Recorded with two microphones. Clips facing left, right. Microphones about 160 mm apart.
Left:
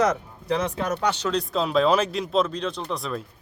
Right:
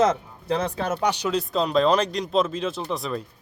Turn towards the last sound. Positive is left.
turn(degrees=0)  # may be behind; listen again after turning